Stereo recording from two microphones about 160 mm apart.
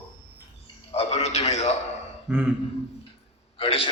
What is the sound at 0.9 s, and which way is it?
Speech, 40° left (ahead or behind).